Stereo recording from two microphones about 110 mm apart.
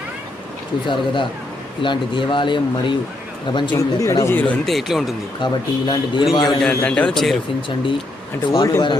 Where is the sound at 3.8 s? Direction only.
30° left (ahead or behind).